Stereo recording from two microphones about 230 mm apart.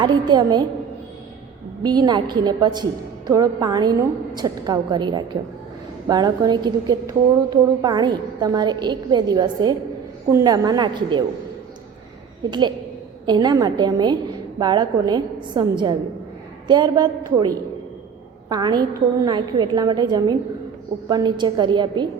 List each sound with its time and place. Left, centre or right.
0.0 s a woman's voice: centre
1.8 s a woman's voice: centre
12.5 s a woman's voice: centre